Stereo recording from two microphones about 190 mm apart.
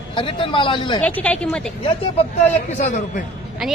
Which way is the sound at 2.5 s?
35° left (ahead or behind).